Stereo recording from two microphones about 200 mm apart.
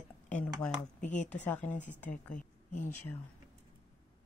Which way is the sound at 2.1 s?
40° left (ahead or behind).